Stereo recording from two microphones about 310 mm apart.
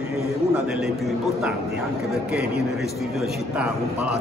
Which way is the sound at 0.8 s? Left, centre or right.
Centre.